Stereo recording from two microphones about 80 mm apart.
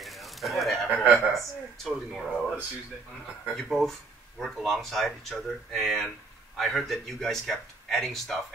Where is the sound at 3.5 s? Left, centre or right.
Centre.